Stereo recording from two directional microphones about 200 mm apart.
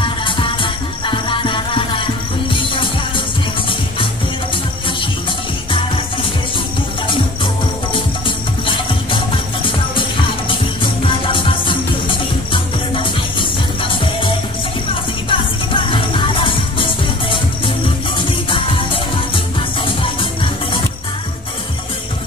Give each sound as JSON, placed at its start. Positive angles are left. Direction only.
{"t": 0.0, "sound": "music", "side_deg": 25}
{"t": 8.6, "sound": "music", "side_deg": 25}
{"t": 10.8, "sound": "music", "side_deg": 25}